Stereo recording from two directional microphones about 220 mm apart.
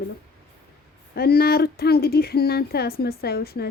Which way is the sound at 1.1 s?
45° left (ahead or behind).